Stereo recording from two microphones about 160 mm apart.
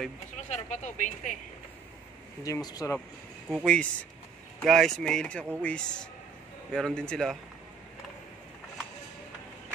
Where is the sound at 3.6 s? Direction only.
5° left (ahead or behind).